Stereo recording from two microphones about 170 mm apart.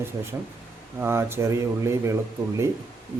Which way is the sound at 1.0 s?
15° right (ahead or behind).